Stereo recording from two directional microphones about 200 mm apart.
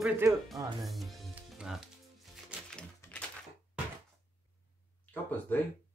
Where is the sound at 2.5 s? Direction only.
5° left (ahead or behind).